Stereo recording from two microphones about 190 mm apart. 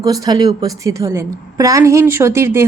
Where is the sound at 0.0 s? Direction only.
20° right (ahead or behind).